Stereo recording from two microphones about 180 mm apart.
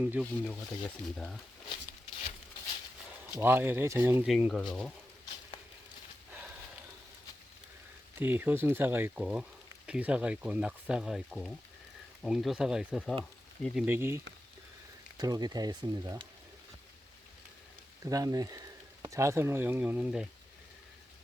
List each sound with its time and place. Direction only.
0.0 s speech: 5° right (ahead or behind)
0.9 s speech: 5° left (ahead or behind)
3.3 s speech: 10° right (ahead or behind)
4.3 s speech: centre (ahead or behind)
8.2 s speech: 10° right (ahead or behind)
13.8 s speech: 10° right (ahead or behind)
15.2 s speech: 20° right (ahead or behind)
18.0 s speech: 20° right (ahead or behind)